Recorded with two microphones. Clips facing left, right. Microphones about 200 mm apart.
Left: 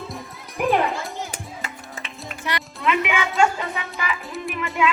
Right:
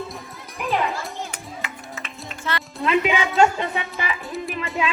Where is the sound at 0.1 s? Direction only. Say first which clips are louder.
Left 1 dB; centre (ahead or behind).